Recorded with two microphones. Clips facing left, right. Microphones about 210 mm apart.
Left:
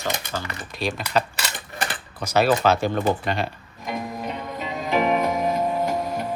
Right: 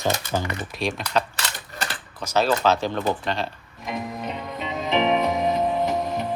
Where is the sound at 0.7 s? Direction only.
Centre (ahead or behind).